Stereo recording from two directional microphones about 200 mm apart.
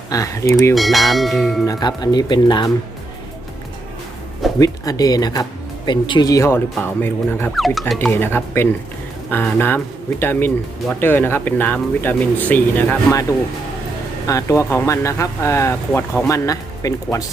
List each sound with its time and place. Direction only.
0.1 s speech: 15° left (ahead or behind)
0.7 s speech: centre (ahead or behind)
1.6 s speech: 20° left (ahead or behind)
4.6 s speech: 20° left (ahead or behind); by 7.9 s centre (ahead or behind)
7.9 s speech: 10° left (ahead or behind)
14.3 s speech: 15° left (ahead or behind)